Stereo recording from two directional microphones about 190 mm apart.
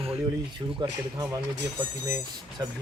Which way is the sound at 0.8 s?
20° right (ahead or behind).